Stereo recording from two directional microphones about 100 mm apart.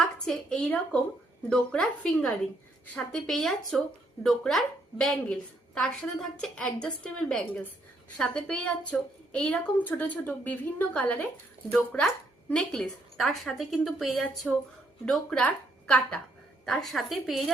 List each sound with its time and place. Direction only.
0.3 s a woman's voice: 10° left (ahead or behind)
15.0 s speech: 10° left (ahead or behind)
16.6 s a woman's voice: 5° left (ahead or behind)